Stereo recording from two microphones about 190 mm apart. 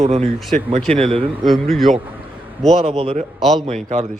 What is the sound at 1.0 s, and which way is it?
Speech, 30° right (ahead or behind).